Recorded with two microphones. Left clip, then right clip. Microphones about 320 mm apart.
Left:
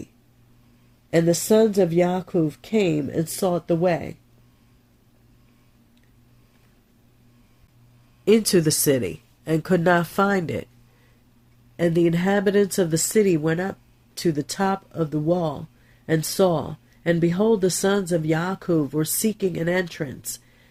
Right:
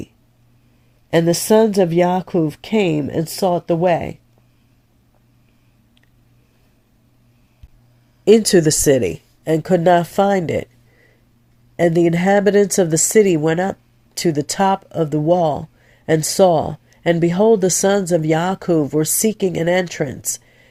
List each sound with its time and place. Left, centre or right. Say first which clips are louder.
1.1 s speech: right 5 dB; right
8.2 s speech: right 7 dB; centre
11.8 s speech: right 6 dB; right